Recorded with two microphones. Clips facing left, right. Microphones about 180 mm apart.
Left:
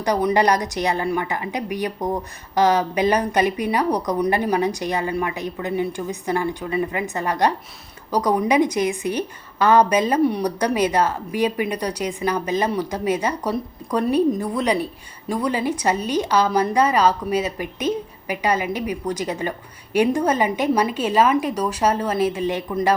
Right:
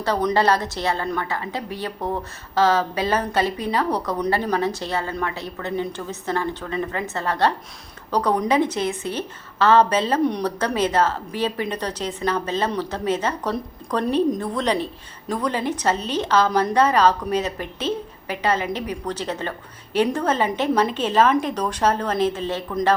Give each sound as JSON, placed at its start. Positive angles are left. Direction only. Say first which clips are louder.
{"t": 0.0, "sound": "a woman's voice", "louder": "left 2 dB", "side_deg": 10}